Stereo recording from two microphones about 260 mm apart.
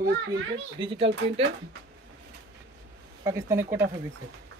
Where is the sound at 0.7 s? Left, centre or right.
Centre.